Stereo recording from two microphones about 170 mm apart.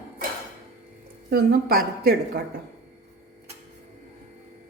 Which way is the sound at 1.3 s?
65° right (ahead or behind).